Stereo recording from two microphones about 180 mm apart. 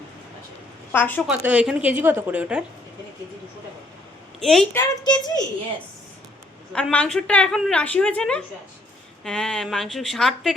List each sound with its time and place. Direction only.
0.9 s a woman's voice: 10° left (ahead or behind)
1.3 s a woman's voice: 10° right (ahead or behind)
4.4 s a woman's voice: centre (ahead or behind)
4.7 s a woman's voice: 20° left (ahead or behind)
6.7 s a woman's voice: 5° left (ahead or behind)